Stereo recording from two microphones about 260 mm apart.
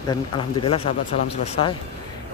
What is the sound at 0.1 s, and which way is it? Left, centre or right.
Speech, centre.